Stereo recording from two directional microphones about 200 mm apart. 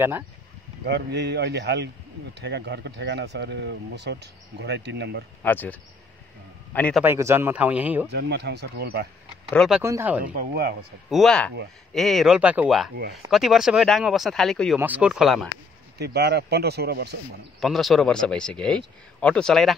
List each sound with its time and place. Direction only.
0.8 s speech: 55° right (ahead or behind)
5.4 s a man's voice: 10° left (ahead or behind)
7.0 s speech: 10° right (ahead or behind)
8.1 s speech: 55° right (ahead or behind)
9.5 s speech: centre (ahead or behind)
9.8 s speech: 10° right (ahead or behind)
10.2 s speech: 45° right (ahead or behind)
11.1 s speech: centre (ahead or behind)
16.0 s speech: 55° right (ahead or behind)
17.6 s speech: centre (ahead or behind)